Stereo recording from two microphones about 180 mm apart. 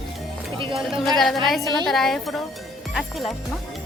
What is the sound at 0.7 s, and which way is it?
Speech, centre (ahead or behind).